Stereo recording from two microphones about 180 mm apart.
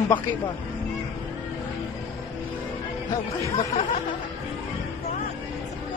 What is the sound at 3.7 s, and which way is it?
Music, 40° left (ahead or behind).